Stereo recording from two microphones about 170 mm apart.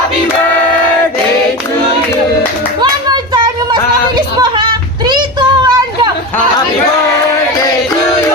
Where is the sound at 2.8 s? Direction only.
25° right (ahead or behind).